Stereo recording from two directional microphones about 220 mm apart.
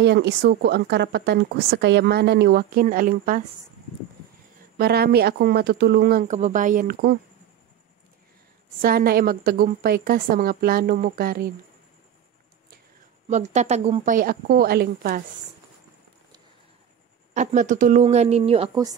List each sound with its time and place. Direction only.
0.0 s speech: 50° right (ahead or behind)
4.7 s speech: 45° right (ahead or behind)
8.8 s a woman's voice: 45° right (ahead or behind)
13.3 s a woman's voice: 30° right (ahead or behind)
17.3 s a woman's voice: 30° right (ahead or behind)